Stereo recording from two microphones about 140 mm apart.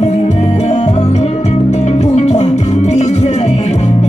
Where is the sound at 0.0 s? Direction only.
55° left (ahead or behind).